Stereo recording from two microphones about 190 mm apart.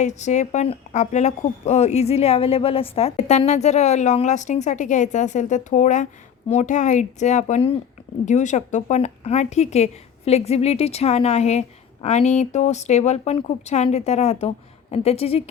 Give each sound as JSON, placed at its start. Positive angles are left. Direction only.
{"t": 0.0, "sound": "speech", "side_deg": 40}